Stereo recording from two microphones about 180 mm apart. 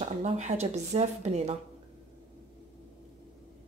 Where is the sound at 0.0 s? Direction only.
40° right (ahead or behind).